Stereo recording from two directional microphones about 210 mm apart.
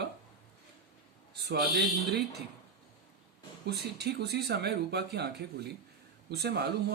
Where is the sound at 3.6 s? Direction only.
50° right (ahead or behind).